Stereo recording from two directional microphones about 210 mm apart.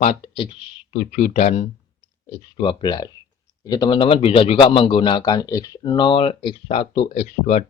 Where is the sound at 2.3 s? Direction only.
20° left (ahead or behind).